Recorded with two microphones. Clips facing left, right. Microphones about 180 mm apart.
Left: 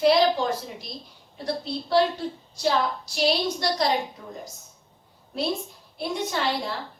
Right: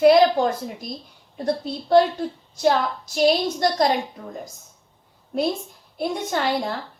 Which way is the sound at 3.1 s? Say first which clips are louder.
Right 5 dB; 50° right (ahead or behind).